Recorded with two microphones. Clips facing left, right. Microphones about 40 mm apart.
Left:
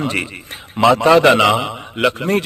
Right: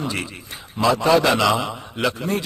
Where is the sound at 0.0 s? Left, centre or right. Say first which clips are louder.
Left 6 dB; left.